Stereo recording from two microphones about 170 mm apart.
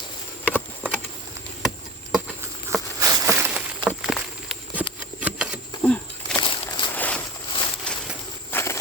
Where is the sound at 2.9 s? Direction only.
20° right (ahead or behind).